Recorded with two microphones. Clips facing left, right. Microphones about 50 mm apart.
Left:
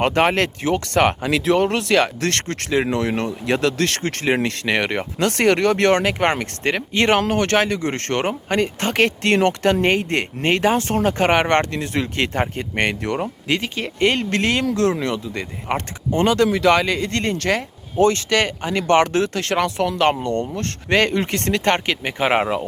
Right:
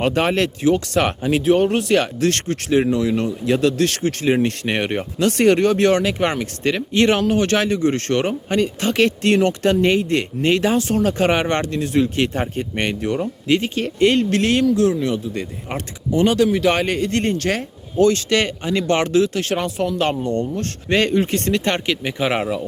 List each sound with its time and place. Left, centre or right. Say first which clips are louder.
0.0 s speech: left 1 dB; left
1.3 s speech: right 2 dB; left
19.5 s speech: left 4 dB; left
20.1 s speech: left 1 dB; left